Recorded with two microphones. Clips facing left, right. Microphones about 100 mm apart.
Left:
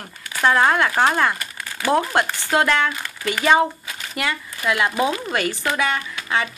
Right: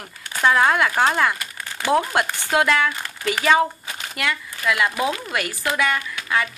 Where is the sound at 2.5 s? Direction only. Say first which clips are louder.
Even; centre (ahead or behind).